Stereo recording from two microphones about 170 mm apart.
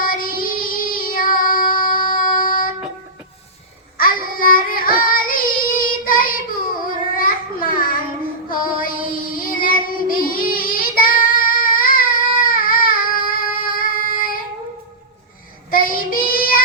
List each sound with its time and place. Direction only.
0.0 s child singing: 55° left (ahead or behind)
3.9 s child singing: 55° left (ahead or behind)
8.4 s music: 55° left (ahead or behind)
9.1 s child singing: 55° left (ahead or behind)
15.7 s child singing: 60° left (ahead or behind)